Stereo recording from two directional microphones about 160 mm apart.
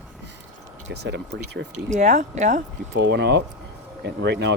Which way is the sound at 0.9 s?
90° right.